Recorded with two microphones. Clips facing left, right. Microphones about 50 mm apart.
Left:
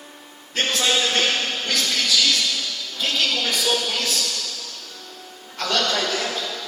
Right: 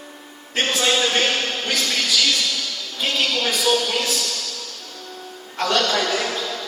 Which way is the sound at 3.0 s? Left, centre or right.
Right.